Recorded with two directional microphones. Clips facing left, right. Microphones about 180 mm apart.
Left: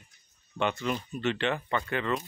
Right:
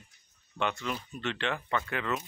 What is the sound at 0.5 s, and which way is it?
Speech, centre (ahead or behind).